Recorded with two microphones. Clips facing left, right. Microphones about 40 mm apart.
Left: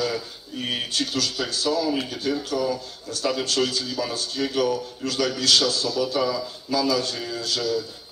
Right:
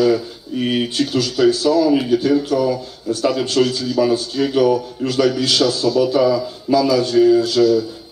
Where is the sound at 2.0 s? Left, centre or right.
Right.